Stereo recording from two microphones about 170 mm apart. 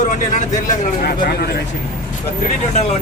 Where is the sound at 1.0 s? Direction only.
65° left (ahead or behind).